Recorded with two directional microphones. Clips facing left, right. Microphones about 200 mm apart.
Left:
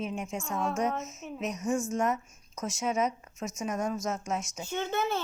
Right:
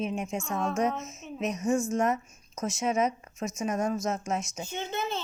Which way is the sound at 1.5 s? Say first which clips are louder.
Right 3 dB; 5° right (ahead or behind).